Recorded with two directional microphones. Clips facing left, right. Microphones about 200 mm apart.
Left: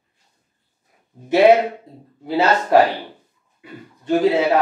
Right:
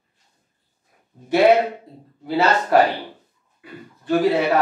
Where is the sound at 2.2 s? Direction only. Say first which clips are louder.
Left 1 dB; 20° left (ahead or behind).